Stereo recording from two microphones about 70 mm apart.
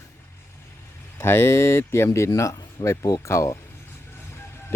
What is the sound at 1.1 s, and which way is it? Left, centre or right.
Speech, left.